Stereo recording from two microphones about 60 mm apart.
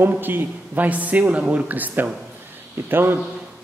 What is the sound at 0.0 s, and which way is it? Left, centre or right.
A man's voice, right.